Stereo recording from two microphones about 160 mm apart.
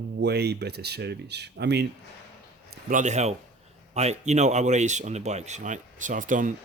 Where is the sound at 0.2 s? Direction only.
90° right.